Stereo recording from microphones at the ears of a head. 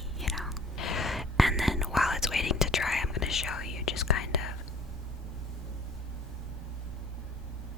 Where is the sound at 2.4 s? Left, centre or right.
Left.